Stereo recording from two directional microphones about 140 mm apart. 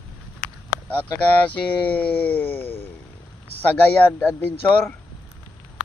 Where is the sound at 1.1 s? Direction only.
10° left (ahead or behind).